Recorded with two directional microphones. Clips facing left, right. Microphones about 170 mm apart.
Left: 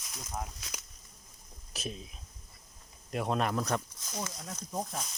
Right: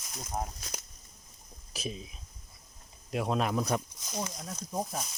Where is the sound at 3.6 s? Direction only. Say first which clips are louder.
Right 2 dB; 15° right (ahead or behind).